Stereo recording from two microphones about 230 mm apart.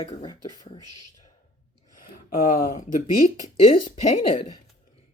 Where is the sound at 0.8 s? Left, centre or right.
Left.